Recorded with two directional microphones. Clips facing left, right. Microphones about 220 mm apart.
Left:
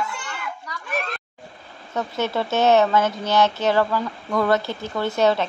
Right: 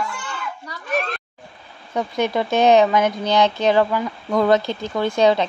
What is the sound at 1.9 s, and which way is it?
Speech, 15° right (ahead or behind).